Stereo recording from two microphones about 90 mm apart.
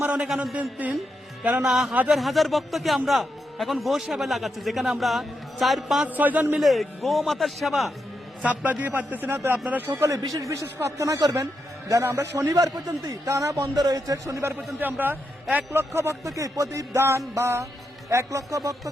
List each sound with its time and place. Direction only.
0.0 s a woman's voice: 10° right (ahead or behind)
1.6 s a man's voice: 5° right (ahead or behind)
6.1 s a man's voice: 20° right (ahead or behind)
6.6 s a man's voice: centre (ahead or behind)
8.4 s a man's voice: 15° right (ahead or behind)
10.1 s a man's voice: 40° right (ahead or behind)
14.8 s a man's voice: 20° right (ahead or behind)
15.9 s a man's voice: 35° right (ahead or behind)